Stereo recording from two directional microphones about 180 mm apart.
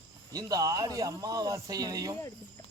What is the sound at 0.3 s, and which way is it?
A man's voice, 20° right (ahead or behind).